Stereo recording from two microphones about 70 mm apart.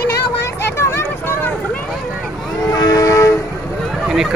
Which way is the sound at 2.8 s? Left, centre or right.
Left.